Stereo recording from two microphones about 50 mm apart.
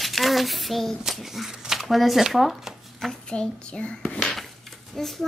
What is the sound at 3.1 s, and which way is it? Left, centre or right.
A child's voice, centre.